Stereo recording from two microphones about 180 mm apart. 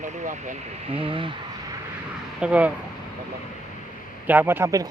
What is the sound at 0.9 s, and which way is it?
Speech, 30° right (ahead or behind).